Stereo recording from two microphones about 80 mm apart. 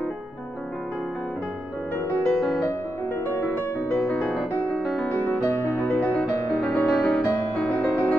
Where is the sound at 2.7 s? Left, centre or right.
Left.